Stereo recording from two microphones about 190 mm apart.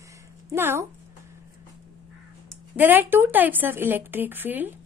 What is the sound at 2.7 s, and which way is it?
A woman's voice, 10° right (ahead or behind).